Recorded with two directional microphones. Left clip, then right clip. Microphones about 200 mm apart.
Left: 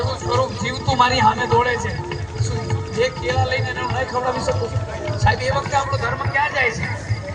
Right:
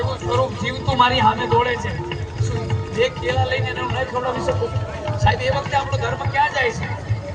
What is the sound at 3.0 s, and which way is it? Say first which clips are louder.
Speech: even; 5° right (ahead or behind).